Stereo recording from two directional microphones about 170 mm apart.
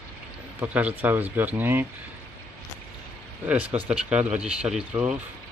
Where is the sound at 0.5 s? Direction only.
10° right (ahead or behind).